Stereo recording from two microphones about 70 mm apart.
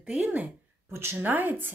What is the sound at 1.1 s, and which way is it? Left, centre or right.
Speech, right.